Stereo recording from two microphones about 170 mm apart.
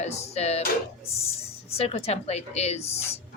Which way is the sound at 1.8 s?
35° left (ahead or behind).